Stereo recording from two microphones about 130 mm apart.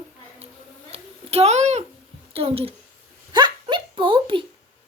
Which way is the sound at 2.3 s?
50° right (ahead or behind).